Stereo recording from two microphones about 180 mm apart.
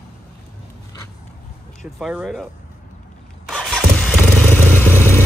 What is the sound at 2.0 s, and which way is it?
Speech, centre (ahead or behind).